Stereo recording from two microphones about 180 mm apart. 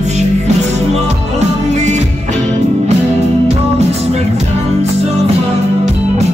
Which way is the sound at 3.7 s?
35° right (ahead or behind).